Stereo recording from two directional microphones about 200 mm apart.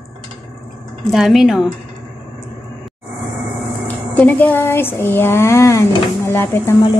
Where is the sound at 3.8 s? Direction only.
10° left (ahead or behind).